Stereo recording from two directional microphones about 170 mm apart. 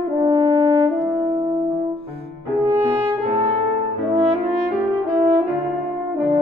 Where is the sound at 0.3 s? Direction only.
20° right (ahead or behind).